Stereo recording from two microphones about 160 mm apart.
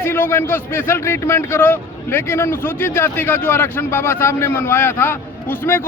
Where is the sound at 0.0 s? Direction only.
15° left (ahead or behind).